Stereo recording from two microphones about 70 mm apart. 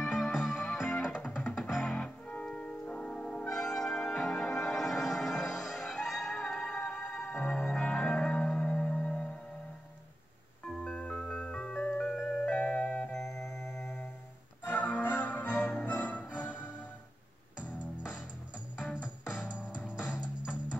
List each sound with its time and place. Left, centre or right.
0.0 s music: centre
1.2 s music: left
1.6 s music: centre
2.0 s music: centre
3.4 s music: centre
11.0 s music: centre
12.4 s music: centre
14.7 s music: left
17.6 s music: centre